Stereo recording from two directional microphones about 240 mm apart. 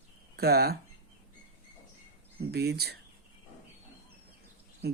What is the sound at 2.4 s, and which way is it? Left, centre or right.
Speech, right.